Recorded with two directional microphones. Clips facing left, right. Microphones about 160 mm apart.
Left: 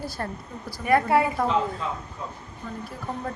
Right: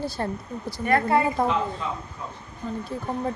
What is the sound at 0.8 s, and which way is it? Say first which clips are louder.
Speech: left 1 dB; 10° left (ahead or behind).